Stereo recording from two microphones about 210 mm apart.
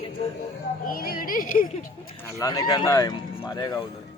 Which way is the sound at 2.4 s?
20° left (ahead or behind).